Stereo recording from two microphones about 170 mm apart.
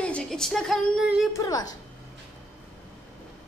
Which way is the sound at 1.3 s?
20° left (ahead or behind).